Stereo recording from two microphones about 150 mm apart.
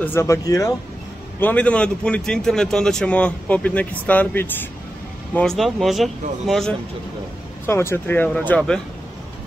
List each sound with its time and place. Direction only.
0.0 s speech: 15° left (ahead or behind)
1.4 s speech: 10° left (ahead or behind)
7.6 s speech: 15° left (ahead or behind)